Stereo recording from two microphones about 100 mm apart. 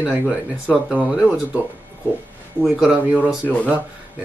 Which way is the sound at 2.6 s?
5° right (ahead or behind).